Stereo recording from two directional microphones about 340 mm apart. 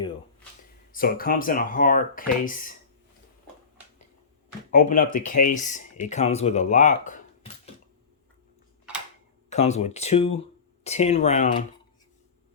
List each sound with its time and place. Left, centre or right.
0.9 s speech: left
4.7 s speech: left
8.9 s mechanisms: centre
9.5 s speech: centre